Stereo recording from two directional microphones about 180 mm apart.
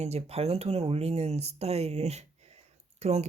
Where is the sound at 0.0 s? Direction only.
35° right (ahead or behind).